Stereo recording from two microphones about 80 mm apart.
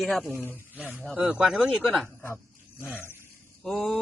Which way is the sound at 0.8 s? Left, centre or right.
Centre.